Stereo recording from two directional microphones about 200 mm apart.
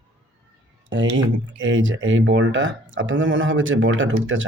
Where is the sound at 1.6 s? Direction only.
70° right (ahead or behind).